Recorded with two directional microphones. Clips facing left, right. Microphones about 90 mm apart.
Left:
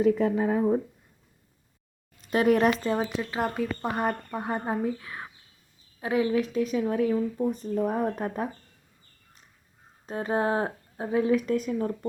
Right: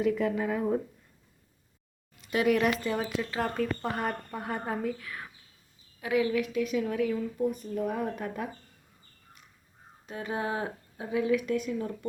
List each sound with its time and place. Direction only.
0.0 s speech: 35° left (ahead or behind)
2.2 s speech: 40° left (ahead or behind)
10.1 s speech: 35° left (ahead or behind)